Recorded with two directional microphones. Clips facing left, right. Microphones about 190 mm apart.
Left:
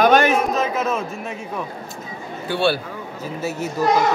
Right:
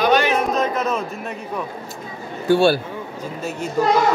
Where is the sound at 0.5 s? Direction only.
Centre (ahead or behind).